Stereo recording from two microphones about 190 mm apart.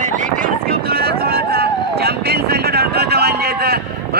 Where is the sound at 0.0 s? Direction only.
40° right (ahead or behind).